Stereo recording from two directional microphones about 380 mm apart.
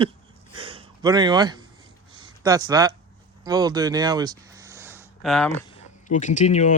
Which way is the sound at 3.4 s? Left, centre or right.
Centre.